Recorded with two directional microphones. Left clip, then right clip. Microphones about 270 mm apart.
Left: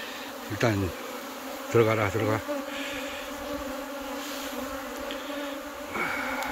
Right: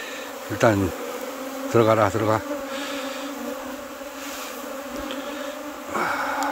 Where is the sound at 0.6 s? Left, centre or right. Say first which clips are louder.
Right 8 dB; centre.